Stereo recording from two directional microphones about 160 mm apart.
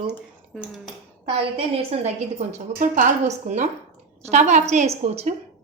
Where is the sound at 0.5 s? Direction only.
Centre (ahead or behind).